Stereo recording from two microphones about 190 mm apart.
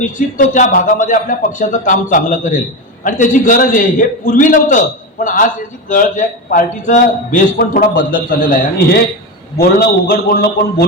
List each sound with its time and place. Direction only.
0.0 s a man's voice: 45° left (ahead or behind)